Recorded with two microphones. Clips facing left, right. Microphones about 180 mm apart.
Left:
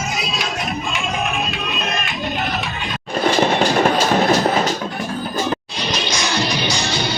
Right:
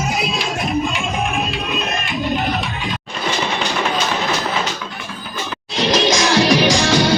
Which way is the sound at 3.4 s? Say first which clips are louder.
Left 6 dB; 45° left (ahead or behind).